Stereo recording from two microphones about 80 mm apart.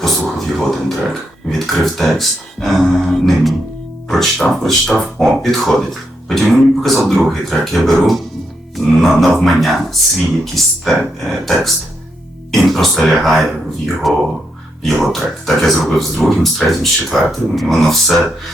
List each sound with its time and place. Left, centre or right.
0.0 s speech: centre